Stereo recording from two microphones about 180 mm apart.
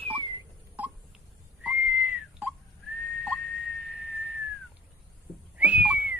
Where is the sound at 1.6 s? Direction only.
10° right (ahead or behind).